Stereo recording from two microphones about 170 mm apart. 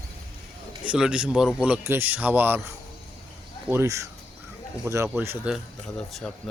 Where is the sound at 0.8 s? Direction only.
5° right (ahead or behind).